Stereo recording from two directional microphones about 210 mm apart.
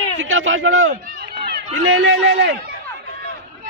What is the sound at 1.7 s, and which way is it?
Speech, 70° right (ahead or behind).